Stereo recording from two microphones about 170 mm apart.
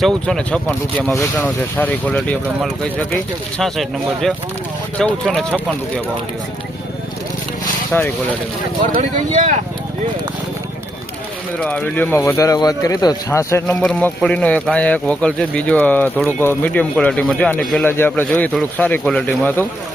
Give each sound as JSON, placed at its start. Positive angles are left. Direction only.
{"t": 0.0, "sound": "speech", "side_deg": 5}
{"t": 7.9, "sound": "speech", "side_deg": 10}
{"t": 9.0, "sound": "speech", "side_deg": -45}
{"t": 11.6, "sound": "speech", "side_deg": 5}
{"t": 13.8, "sound": "speech", "side_deg": 5}